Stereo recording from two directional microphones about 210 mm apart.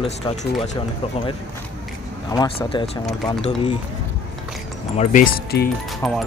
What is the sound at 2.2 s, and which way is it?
Speech, 20° left (ahead or behind).